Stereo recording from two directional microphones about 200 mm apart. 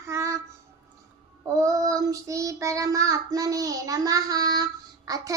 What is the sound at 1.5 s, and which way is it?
Child singing, 15° right (ahead or behind).